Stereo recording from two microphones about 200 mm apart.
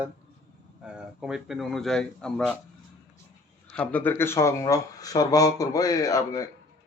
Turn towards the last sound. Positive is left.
turn(degrees=15)  # may be behind; listen again after turning